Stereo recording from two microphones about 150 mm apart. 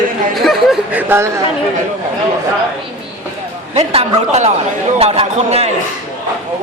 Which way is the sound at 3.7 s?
45° right (ahead or behind).